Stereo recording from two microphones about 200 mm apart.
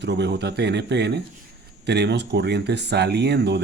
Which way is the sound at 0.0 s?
60° right (ahead or behind).